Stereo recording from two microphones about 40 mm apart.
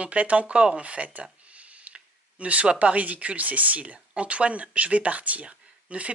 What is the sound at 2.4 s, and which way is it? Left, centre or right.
Speech, right.